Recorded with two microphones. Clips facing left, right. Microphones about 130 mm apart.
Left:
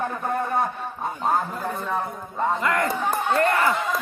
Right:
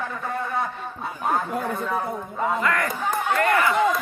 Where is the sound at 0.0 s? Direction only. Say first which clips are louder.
Left 3 dB; 45° left (ahead or behind).